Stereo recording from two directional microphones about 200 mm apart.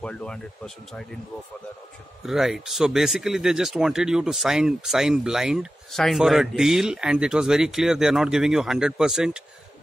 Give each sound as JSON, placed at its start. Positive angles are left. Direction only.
{"t": 0.0, "sound": "speech", "side_deg": 5}
{"t": 2.2, "sound": "speech", "side_deg": 0}